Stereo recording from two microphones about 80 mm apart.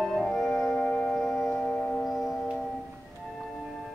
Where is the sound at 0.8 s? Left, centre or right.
Centre.